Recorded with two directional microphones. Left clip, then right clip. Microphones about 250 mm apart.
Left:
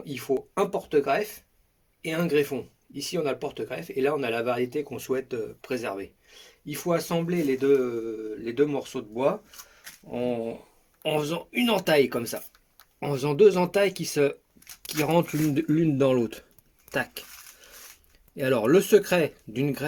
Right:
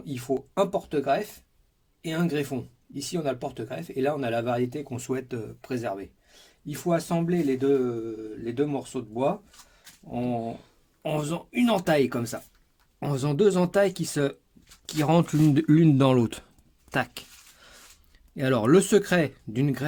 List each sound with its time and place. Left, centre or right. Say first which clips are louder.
0.0 s speech: left 2 dB; right
18.3 s speech: even; right